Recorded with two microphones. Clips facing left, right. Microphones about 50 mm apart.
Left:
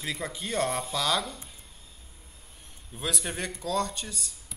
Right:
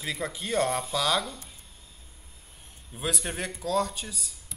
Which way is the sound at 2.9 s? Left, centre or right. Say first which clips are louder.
Right 1 dB; centre.